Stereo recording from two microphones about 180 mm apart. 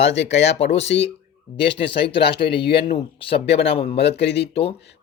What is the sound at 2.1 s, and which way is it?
Speech, 65° left (ahead or behind).